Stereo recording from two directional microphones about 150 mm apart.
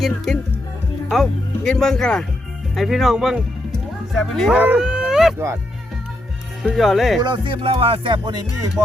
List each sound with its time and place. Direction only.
0.3 s speech: centre (ahead or behind)
4.6 s a sound: 10° right (ahead or behind)
6.6 s speech: centre (ahead or behind)
7.2 s speech: 30° right (ahead or behind)